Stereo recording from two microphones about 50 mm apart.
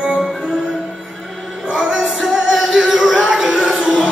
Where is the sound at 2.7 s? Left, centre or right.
Centre.